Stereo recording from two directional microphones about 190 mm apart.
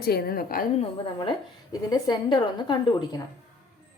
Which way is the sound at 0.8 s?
25° left (ahead or behind).